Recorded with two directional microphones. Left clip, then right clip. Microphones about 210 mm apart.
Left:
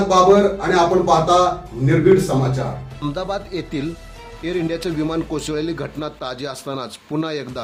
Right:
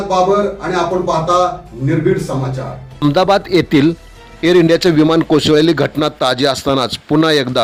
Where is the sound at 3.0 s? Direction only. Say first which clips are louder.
Right 13 dB; 40° right (ahead or behind).